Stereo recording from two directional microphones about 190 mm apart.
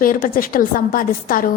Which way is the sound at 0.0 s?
45° left (ahead or behind).